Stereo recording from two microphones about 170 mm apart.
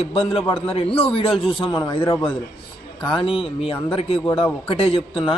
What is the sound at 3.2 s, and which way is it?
A man's voice, 35° left (ahead or behind).